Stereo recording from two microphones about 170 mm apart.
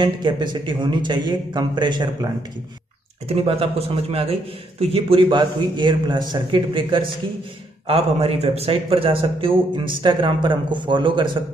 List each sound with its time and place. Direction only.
0.0 s a man's voice: 25° right (ahead or behind)